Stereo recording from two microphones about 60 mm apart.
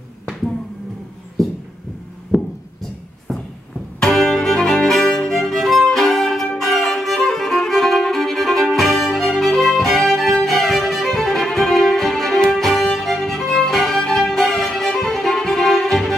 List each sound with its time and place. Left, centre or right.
2.3 s a sound: centre
4.0 s music: centre
6.6 s violin: centre
13.0 s music: centre